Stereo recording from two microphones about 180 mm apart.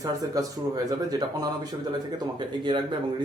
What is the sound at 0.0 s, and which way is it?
Speech, 20° right (ahead or behind).